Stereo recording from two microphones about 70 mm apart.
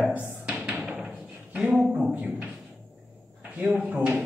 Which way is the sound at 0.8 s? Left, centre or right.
Centre.